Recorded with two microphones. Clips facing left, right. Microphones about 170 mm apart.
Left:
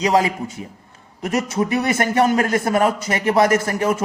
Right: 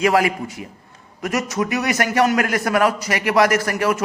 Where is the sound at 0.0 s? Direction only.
25° left (ahead or behind).